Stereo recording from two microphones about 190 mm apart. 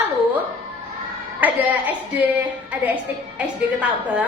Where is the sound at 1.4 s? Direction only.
10° right (ahead or behind).